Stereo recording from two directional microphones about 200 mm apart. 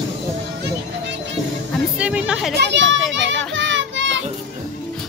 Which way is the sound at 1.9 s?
5° right (ahead or behind).